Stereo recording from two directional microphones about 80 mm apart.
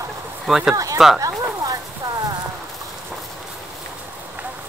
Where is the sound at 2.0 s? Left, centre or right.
Right.